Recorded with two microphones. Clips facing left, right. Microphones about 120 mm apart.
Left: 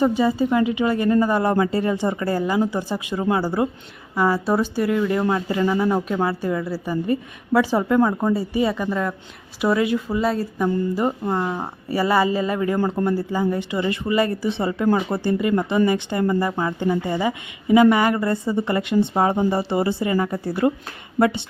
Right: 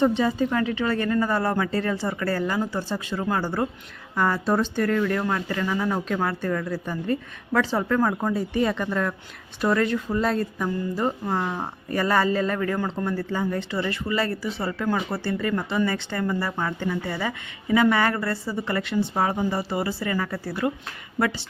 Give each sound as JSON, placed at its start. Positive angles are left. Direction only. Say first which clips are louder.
{"t": 0.0, "sound": "a woman's voice", "louder": "left 2 dB", "side_deg": 5}